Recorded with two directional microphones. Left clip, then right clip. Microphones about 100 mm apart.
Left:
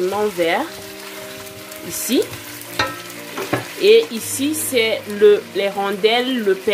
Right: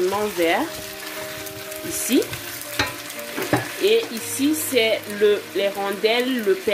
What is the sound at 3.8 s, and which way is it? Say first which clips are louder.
Frying: left 7 dB; 90° left.